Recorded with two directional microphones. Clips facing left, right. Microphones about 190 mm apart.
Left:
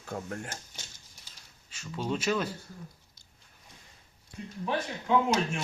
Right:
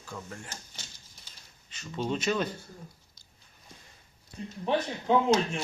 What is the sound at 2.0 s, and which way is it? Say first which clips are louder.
Speech: right 1 dB; centre (ahead or behind).